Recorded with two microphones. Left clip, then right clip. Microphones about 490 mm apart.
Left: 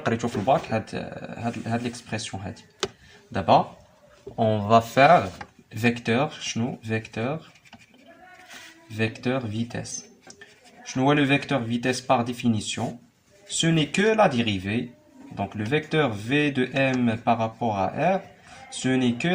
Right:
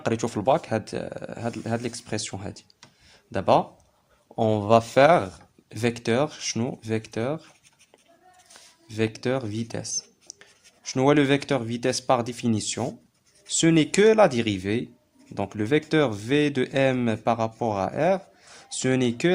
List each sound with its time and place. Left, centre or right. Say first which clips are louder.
0.0 s speech: right 1 dB; right
4.4 s speech: even; right
9.0 s speech: right 1 dB; right
10.9 s speech: right 1 dB; right